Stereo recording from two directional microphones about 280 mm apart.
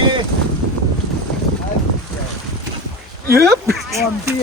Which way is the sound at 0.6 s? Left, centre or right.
Right.